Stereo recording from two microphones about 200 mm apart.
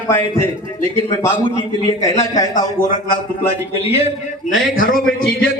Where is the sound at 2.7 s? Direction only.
40° left (ahead or behind).